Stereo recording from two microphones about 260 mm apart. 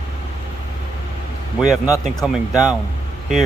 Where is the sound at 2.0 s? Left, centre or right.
Centre.